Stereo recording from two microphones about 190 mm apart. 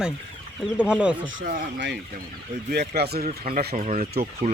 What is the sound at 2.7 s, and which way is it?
Speech, 60° right (ahead or behind).